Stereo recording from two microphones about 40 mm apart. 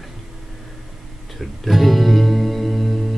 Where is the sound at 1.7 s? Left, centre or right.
Centre.